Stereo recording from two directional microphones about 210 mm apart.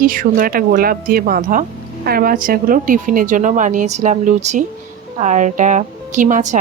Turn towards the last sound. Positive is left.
turn(degrees=-35)  # may be behind; listen again after turning